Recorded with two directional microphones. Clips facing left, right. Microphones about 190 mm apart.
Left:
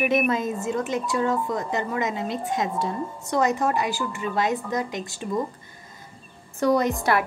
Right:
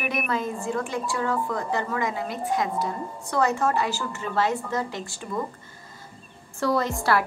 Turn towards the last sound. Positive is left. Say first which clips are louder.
# left 4 dB
turn(degrees=20)  # may be behind; listen again after turning